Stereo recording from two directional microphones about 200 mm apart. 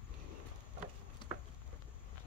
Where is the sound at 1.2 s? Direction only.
25° left (ahead or behind).